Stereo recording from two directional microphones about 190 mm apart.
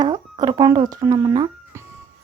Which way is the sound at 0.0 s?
20° right (ahead or behind).